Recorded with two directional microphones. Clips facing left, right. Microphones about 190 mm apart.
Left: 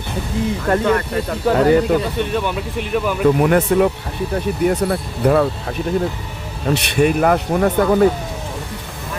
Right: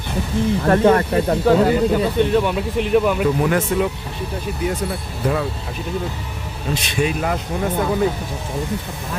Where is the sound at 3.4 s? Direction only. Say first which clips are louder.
Left 4 dB; 55° left (ahead or behind).